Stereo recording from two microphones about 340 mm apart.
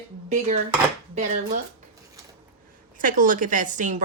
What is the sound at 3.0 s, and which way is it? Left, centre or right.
A woman's voice, right.